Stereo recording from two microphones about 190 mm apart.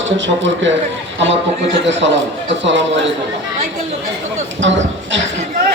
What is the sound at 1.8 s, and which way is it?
A man's voice, 75° right (ahead or behind).